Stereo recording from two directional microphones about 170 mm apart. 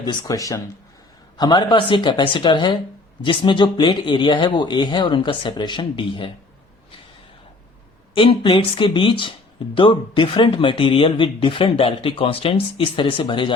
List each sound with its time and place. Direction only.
0.0 s speech: 25° left (ahead or behind)
8.1 s speech: 30° left (ahead or behind)